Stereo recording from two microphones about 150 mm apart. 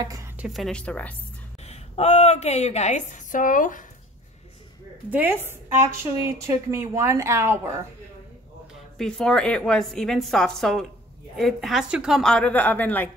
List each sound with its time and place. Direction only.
0.0 s a woman's voice: 25° right (ahead or behind)
0.4 s a woman's voice: centre (ahead or behind)
1.6 s a woman's voice: 45° left (ahead or behind); by 3.8 s 65° left (ahead or behind)
5.1 s a woman's voice: 15° right (ahead or behind)
8.9 s a woman's voice: 5° left (ahead or behind)